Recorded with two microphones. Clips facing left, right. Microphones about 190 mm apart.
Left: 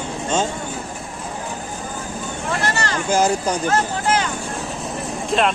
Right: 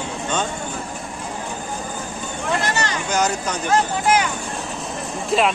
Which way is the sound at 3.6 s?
15° right (ahead or behind).